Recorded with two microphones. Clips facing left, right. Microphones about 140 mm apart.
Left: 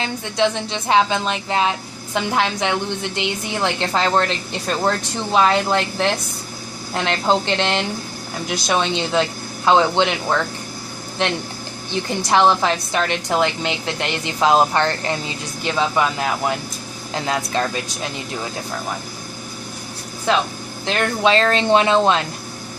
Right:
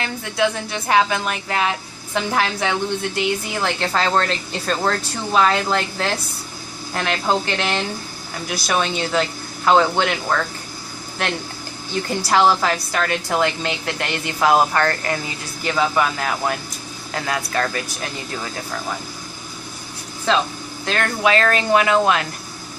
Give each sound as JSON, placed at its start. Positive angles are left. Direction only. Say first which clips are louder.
{"t": 0.0, "sound": "a woman's voice", "louder": "left 1 dB", "side_deg": 25}
{"t": 20.8, "sound": "a woman's voice", "louder": "left 2 dB", "side_deg": 20}